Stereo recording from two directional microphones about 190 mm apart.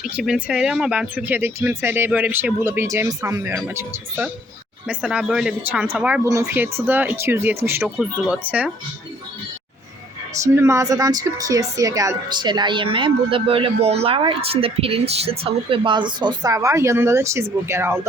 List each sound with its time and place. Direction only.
0.0 s speech: 5° right (ahead or behind)
7.8 s speech: centre (ahead or behind)
10.3 s speech: 15° right (ahead or behind)